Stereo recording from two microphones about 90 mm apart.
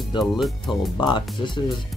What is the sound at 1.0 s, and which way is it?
Speech, 60° left (ahead or behind).